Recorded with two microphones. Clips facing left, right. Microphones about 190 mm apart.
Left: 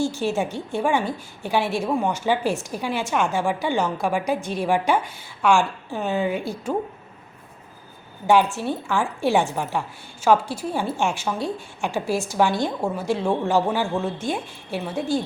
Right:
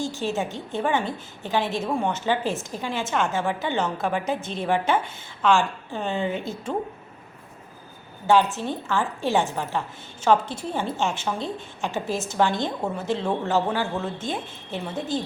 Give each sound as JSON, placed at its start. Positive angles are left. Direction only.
{"t": 0.0, "sound": "a woman's voice", "side_deg": -20}
{"t": 0.7, "sound": "a woman's voice", "side_deg": 10}
{"t": 8.5, "sound": "a woman's voice", "side_deg": 15}